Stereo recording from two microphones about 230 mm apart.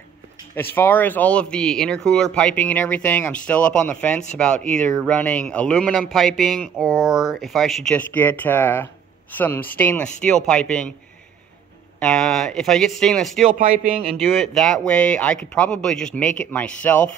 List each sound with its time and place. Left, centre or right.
0.6 s a man's voice: centre
12.0 s a man's voice: centre
13.5 s a man's voice: right
14.1 s a man's voice: centre